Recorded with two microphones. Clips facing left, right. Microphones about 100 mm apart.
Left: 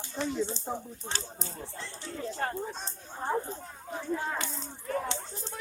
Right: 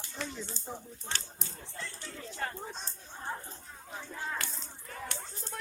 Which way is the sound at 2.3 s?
45° left (ahead or behind).